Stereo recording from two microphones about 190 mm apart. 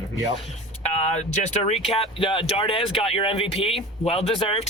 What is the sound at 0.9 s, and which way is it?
Speech, 35° left (ahead or behind).